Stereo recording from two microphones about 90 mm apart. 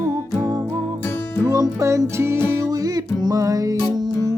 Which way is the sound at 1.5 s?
35° right (ahead or behind).